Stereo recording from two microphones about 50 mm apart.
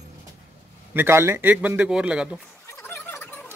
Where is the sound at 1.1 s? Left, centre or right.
Right.